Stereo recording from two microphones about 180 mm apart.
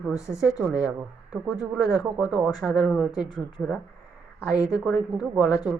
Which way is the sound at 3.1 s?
25° left (ahead or behind).